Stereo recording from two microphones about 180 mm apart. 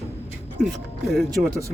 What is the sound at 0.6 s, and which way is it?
Speech, centre (ahead or behind).